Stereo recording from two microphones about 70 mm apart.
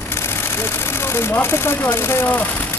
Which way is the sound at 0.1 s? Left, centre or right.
Left.